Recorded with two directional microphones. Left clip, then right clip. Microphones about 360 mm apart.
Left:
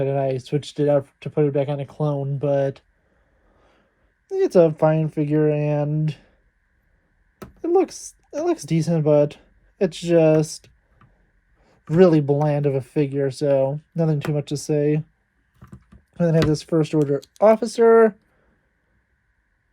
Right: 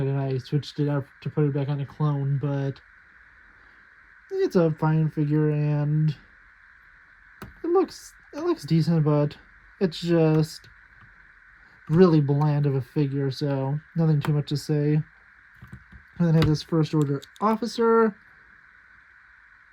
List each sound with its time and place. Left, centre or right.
0.0 s speech: centre
4.3 s speech: centre
7.3 s a sound: centre
8.6 s speech: centre
11.9 s speech: centre
16.1 s speech: centre